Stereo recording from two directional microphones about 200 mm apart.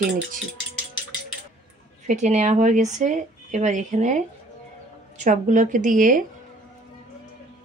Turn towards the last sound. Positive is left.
turn(degrees=-40)  # may be behind; listen again after turning